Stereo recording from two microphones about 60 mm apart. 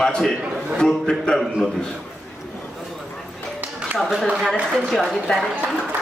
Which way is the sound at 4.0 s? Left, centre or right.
Centre.